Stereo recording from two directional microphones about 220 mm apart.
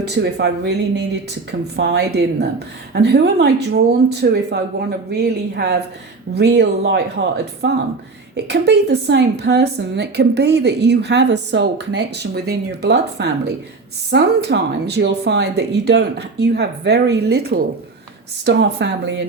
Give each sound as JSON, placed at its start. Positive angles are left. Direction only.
{"t": 0.1, "sound": "a woman's voice", "side_deg": -50}
{"t": 8.4, "sound": "a woman's voice", "side_deg": -50}